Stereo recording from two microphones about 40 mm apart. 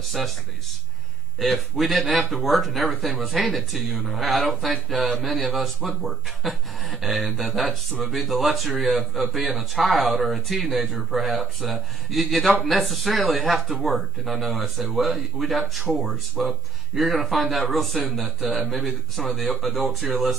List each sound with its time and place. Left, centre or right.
1.4 s speech: centre